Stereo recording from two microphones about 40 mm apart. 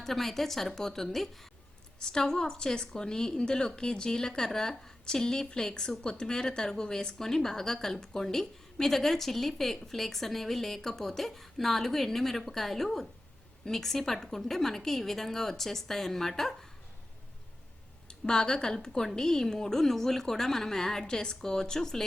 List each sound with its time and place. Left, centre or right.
0.0 s a woman's voice: centre
2.1 s a woman's voice: centre
18.1 s a woman's voice: centre